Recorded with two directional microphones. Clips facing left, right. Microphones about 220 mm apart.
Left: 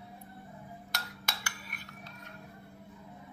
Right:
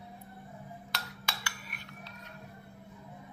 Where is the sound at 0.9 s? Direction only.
45° left (ahead or behind).